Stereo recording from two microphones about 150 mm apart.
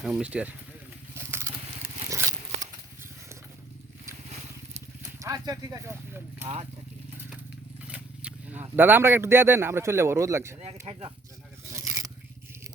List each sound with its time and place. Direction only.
0.1 s speech: 10° right (ahead or behind)
1.1 s vehicle: 15° right (ahead or behind)
2.0 s a sound: 20° right (ahead or behind)
5.2 s speech: 20° right (ahead or behind)
7.9 s a sound: 10° right (ahead or behind)
8.7 s speech: 15° right (ahead or behind)
10.9 s speech: 40° right (ahead or behind)
11.7 s scrape: 20° right (ahead or behind)